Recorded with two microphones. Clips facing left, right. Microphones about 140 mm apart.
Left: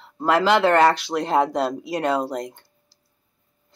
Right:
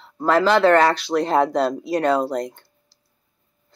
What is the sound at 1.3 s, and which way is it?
Speech, 20° left (ahead or behind).